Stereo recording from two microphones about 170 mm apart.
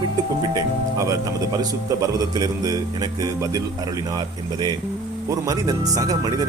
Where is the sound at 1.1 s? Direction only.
20° right (ahead or behind).